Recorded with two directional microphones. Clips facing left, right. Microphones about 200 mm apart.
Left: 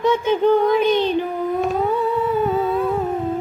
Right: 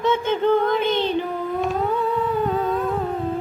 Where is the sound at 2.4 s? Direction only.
5° left (ahead or behind).